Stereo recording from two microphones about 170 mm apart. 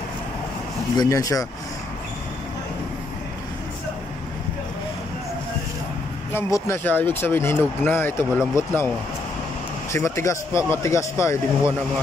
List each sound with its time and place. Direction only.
0.9 s speech: 20° left (ahead or behind)
6.3 s speech: 15° left (ahead or behind)
9.9 s speech: 15° left (ahead or behind)